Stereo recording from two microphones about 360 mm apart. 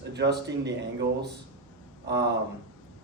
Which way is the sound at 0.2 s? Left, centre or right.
Right.